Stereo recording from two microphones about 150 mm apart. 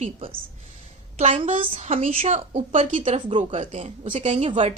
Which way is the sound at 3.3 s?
35° right (ahead or behind).